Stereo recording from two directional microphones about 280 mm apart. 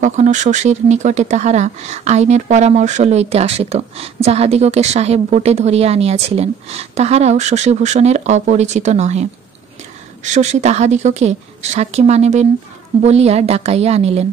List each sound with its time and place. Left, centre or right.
0.0 s speech: right